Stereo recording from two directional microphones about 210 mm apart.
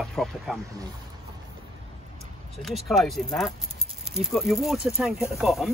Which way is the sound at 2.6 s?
Centre (ahead or behind).